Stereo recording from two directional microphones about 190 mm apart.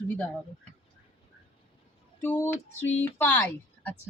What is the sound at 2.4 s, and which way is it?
Speech, 10° left (ahead or behind).